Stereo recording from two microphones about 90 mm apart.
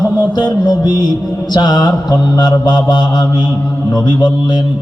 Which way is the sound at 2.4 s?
55° left (ahead or behind).